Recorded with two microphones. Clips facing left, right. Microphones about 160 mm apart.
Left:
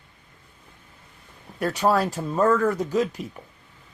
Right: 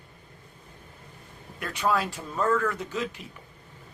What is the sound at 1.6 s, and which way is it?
Speech, 40° left (ahead or behind).